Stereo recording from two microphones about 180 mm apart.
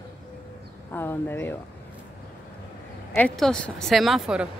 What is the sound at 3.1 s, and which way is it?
Speech, 5° left (ahead or behind).